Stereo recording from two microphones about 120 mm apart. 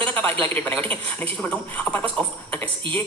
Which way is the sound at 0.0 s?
15° left (ahead or behind).